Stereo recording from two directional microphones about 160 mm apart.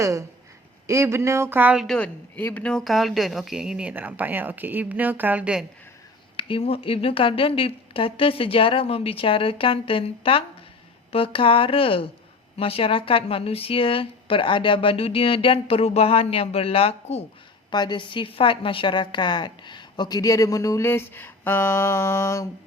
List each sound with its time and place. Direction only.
0.0 s speech: 20° right (ahead or behind)
6.3 s speech: 35° left (ahead or behind)
17.7 s a woman's voice: 30° left (ahead or behind)